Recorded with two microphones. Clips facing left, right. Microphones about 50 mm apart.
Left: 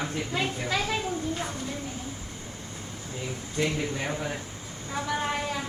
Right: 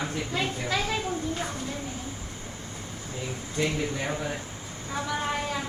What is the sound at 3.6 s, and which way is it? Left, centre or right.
Speech, centre.